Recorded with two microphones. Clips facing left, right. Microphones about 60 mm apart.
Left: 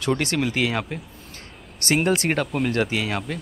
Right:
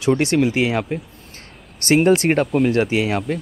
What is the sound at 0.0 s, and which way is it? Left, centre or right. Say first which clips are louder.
Speech: right 6 dB; centre.